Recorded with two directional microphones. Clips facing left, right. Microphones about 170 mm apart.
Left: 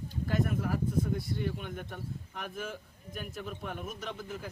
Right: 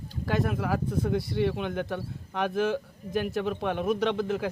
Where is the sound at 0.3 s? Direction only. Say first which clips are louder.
Right 4 dB; 80° right.